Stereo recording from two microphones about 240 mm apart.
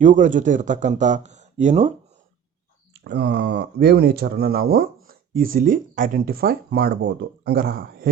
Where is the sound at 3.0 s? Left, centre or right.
Right.